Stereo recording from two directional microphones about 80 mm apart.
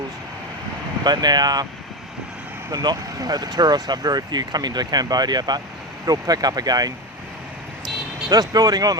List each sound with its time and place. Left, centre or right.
1.0 s speech: right
2.8 s speech: right
8.3 s speech: right